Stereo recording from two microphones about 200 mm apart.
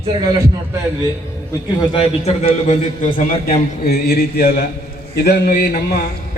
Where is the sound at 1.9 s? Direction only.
30° left (ahead or behind).